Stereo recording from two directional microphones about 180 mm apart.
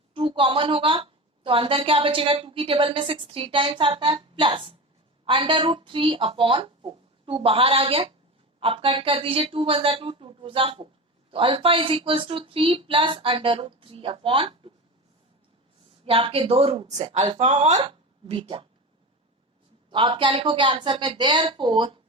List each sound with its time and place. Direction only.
0.1 s a woman's voice: 30° right (ahead or behind)
16.0 s a woman's voice: 30° right (ahead or behind)
19.9 s a woman's voice: 30° right (ahead or behind)